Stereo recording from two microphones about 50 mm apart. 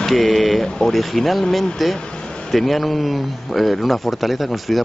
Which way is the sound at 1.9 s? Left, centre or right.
Centre.